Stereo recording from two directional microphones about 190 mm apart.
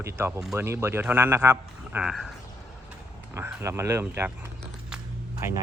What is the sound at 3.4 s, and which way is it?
Speech, 10° right (ahead or behind).